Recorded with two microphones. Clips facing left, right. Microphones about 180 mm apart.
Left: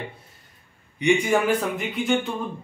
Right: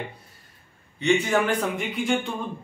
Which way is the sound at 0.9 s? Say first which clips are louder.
Left 1 dB; 15° left (ahead or behind).